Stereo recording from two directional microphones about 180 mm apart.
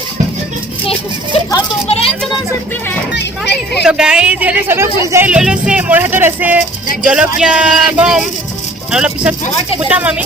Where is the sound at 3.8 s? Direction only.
5° right (ahead or behind).